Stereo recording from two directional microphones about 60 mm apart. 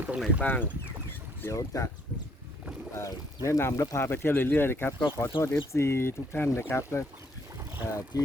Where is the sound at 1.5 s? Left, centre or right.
Left.